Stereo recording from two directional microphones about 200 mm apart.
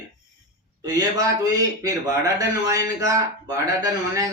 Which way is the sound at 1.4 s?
15° right (ahead or behind).